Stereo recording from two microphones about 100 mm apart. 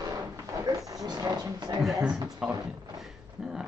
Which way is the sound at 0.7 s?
35° right (ahead or behind).